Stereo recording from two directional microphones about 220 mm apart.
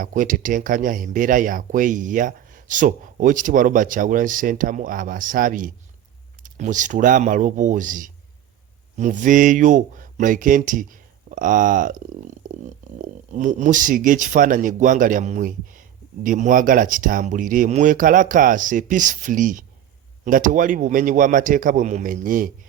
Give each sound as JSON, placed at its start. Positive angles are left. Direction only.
{"t": 0.0, "sound": "speech", "side_deg": -35}